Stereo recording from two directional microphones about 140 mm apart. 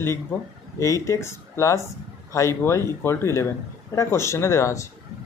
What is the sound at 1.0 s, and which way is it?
Speech, 20° left (ahead or behind).